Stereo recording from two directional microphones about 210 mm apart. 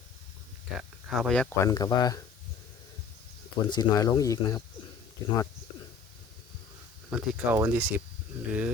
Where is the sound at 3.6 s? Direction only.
20° left (ahead or behind).